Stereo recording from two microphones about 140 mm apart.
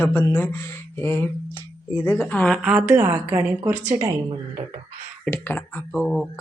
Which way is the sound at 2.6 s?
10° right (ahead or behind).